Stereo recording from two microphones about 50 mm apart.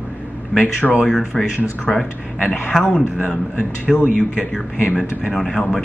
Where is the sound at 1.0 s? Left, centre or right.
Centre.